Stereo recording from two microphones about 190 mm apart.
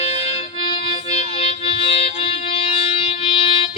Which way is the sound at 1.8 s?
30° left (ahead or behind).